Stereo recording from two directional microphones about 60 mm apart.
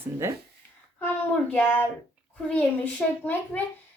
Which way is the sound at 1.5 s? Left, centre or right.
Left.